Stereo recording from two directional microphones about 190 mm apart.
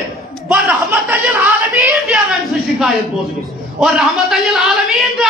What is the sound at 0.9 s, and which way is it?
Speech, 10° right (ahead or behind).